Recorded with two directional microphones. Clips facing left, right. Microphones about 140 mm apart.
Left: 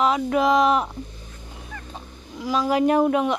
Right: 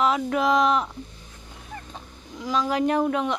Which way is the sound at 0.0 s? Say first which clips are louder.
Left 2 dB; centre (ahead or behind).